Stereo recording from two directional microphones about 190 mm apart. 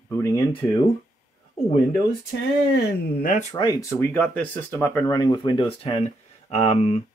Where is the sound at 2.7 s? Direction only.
55° left (ahead or behind).